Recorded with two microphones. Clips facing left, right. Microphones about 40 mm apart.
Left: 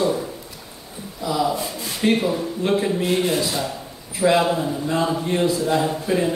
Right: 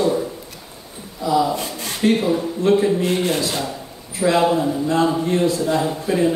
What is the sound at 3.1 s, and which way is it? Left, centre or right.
Speech, right.